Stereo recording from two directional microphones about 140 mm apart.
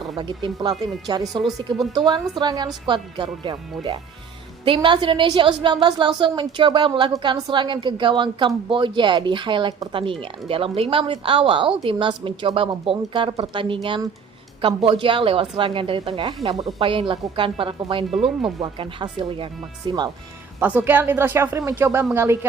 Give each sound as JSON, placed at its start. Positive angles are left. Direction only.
{"t": 0.2, "sound": "a woman's voice", "side_deg": -35}
{"t": 20.6, "sound": "speech", "side_deg": -10}